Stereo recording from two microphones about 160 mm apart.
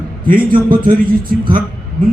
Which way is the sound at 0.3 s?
60° right (ahead or behind).